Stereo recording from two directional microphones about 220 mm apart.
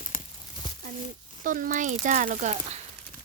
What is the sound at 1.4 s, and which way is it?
Speech, 35° right (ahead or behind).